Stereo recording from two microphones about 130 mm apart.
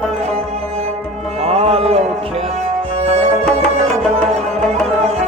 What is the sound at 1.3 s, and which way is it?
Music, 50° right (ahead or behind).